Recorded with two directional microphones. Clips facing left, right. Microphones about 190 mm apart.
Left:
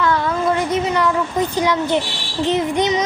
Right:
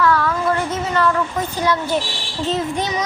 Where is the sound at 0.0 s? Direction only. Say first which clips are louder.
Even; 20° left (ahead or behind).